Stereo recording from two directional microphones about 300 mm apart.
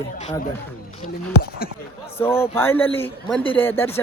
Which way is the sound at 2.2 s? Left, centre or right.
Centre.